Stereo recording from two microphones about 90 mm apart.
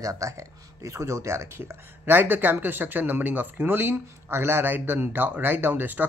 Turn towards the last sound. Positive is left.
turn(degrees=-20)  # may be behind; listen again after turning